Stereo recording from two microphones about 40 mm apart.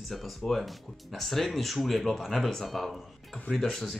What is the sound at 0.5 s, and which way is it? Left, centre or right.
Speech, centre.